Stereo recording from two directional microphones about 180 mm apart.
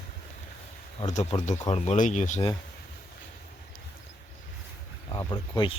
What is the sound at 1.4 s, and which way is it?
Speech, 40° left (ahead or behind).